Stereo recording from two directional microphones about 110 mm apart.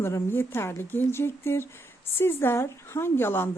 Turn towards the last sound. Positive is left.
turn(degrees=20)  # may be behind; listen again after turning